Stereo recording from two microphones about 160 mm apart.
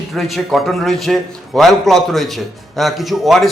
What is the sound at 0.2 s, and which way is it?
A man's voice, centre (ahead or behind).